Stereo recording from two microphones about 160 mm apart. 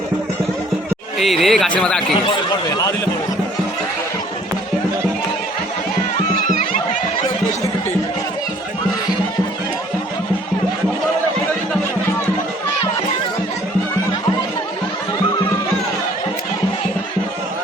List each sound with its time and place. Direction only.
1.2 s speech: centre (ahead or behind)
2.5 s speech: 25° left (ahead or behind)